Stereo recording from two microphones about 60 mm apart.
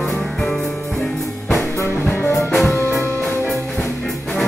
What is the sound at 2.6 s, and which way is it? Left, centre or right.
Music, left.